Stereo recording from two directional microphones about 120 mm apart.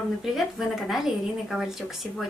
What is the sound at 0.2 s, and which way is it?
Speech, centre (ahead or behind).